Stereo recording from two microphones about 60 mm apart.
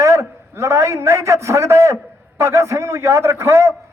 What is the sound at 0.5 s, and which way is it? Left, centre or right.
A man's voice, right.